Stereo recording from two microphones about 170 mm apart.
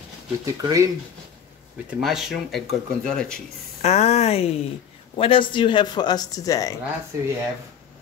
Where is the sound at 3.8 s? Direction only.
40° left (ahead or behind); by 6.8 s 20° left (ahead or behind).